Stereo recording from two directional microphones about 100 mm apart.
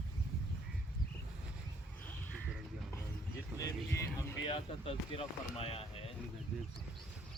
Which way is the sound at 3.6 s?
35° left (ahead or behind).